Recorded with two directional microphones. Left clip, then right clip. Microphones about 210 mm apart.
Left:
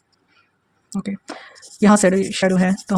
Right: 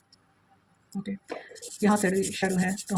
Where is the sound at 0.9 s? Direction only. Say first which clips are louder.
Left 7 dB; 50° left (ahead or behind).